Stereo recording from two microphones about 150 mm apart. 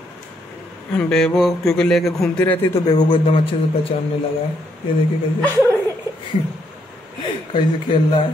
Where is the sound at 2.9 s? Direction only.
30° left (ahead or behind).